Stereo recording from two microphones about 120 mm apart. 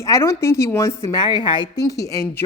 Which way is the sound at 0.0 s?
25° left (ahead or behind).